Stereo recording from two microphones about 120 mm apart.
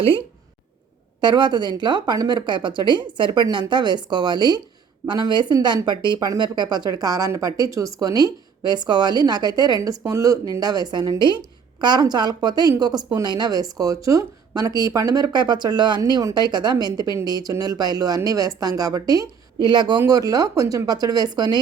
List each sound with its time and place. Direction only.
1.2 s speech: 40° right (ahead or behind)